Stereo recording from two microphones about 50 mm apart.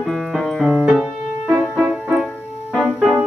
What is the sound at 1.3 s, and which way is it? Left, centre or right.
Music, right.